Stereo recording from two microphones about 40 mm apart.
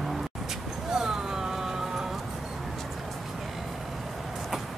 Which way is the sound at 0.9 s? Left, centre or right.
Centre.